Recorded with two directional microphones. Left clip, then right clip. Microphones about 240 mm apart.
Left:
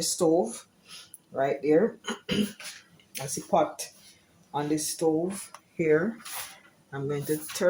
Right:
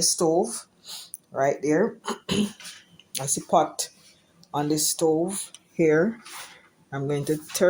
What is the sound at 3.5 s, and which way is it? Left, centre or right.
Speech, right.